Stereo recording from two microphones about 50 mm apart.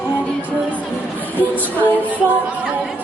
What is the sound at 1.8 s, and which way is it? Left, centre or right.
Music, left.